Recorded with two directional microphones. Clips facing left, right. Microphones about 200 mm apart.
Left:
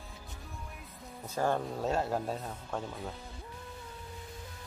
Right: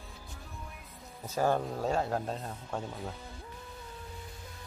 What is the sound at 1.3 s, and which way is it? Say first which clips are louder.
Speech: right 2 dB; 5° right (ahead or behind).